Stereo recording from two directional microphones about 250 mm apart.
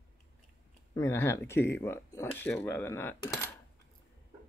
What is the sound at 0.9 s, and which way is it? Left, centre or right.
Speech, centre.